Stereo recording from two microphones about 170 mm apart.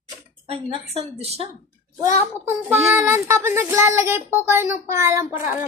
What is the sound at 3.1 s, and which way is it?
A child's voice, 15° right (ahead or behind).